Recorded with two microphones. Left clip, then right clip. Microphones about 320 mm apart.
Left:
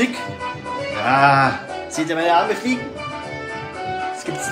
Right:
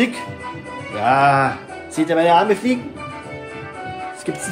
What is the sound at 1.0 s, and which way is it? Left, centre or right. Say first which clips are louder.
Music: even; centre.